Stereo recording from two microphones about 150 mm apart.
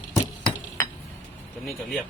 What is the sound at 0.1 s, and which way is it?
Chink, 25° left (ahead or behind).